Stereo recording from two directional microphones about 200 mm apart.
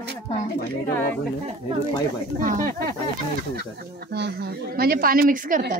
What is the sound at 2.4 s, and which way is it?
Speech, 40° right (ahead or behind).